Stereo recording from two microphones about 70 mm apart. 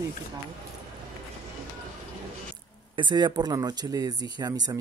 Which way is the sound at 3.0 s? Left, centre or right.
Right.